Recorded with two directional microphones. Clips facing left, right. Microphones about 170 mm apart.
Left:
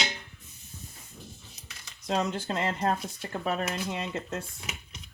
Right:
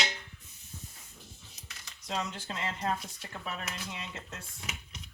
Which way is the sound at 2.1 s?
45° left (ahead or behind).